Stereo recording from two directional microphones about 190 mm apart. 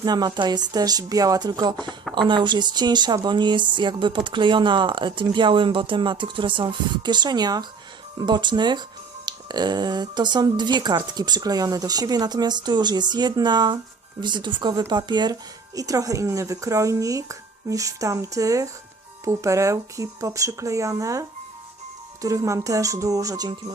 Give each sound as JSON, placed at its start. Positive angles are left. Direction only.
{"t": 0.0, "sound": "speech", "side_deg": -20}